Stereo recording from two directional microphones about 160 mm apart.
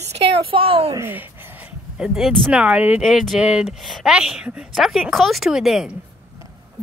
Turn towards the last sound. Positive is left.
turn(degrees=0)  # may be behind; listen again after turning